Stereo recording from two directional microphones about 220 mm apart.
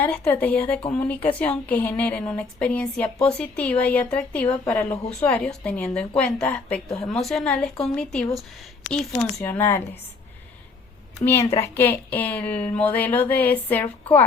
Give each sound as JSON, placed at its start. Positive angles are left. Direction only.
{"t": 0.0, "sound": "a woman's voice", "side_deg": 10}
{"t": 11.3, "sound": "a woman's voice", "side_deg": 15}